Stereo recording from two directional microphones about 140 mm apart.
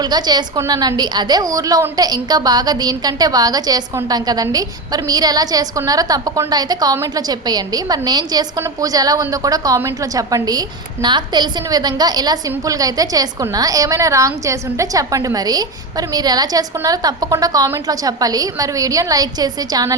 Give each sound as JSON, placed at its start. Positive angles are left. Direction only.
{"t": 0.0, "sound": "a woman's voice", "side_deg": -30}